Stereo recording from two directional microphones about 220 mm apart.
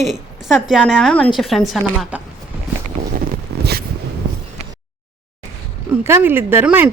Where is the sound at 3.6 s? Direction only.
45° right (ahead or behind).